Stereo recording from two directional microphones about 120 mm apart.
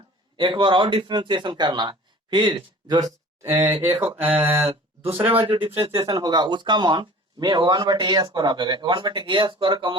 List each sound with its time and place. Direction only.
0.3 s speech: 40° right (ahead or behind)
3.4 s speech: 20° right (ahead or behind)
4.3 s a sound: 15° right (ahead or behind)
5.3 s speech: 50° right (ahead or behind)
6.0 s speech: 30° right (ahead or behind)